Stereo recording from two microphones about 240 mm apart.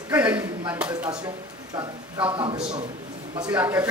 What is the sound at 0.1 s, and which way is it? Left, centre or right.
A man's voice, centre.